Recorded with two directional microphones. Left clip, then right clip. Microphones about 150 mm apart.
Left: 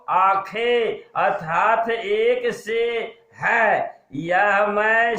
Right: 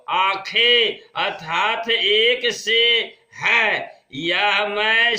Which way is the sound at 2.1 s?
40° right (ahead or behind).